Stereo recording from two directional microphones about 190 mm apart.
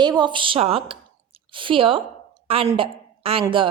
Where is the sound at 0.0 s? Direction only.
20° right (ahead or behind).